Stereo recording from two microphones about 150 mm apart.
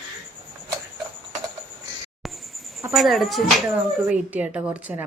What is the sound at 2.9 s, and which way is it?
A woman's voice, centre (ahead or behind).